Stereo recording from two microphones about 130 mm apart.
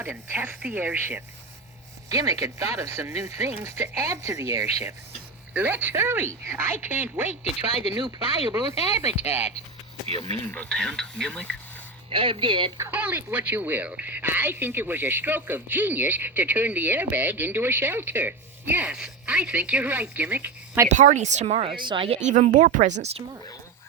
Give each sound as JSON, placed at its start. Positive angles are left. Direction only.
{"t": 0.0, "sound": "a woman's voice", "side_deg": -15}
{"t": 2.0, "sound": "a woman's voice", "side_deg": -25}
{"t": 5.5, "sound": "a woman's voice", "side_deg": -15}
{"t": 7.4, "sound": "speech", "side_deg": 50}
{"t": 7.9, "sound": "speech", "side_deg": -35}
{"t": 8.9, "sound": "speech", "side_deg": 55}
{"t": 10.1, "sound": "speech", "side_deg": 45}
{"t": 10.5, "sound": "speech", "side_deg": 5}
{"t": 12.0, "sound": "speech", "side_deg": -45}
{"t": 12.9, "sound": "a woman's voice", "side_deg": -15}
{"t": 20.8, "sound": "speech", "side_deg": -70}
{"t": 22.3, "sound": "speech", "side_deg": -90}